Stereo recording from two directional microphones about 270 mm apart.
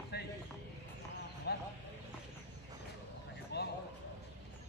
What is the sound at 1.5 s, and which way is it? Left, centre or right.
Clip-clop, left.